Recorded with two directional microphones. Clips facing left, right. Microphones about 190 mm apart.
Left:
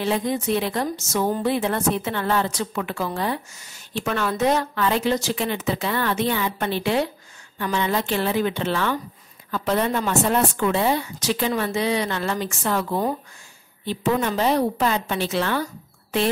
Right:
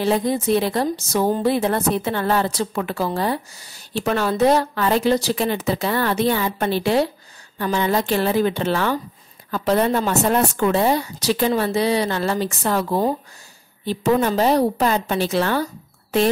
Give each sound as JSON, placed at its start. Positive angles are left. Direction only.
{"t": 0.0, "sound": "a woman's voice", "side_deg": -35}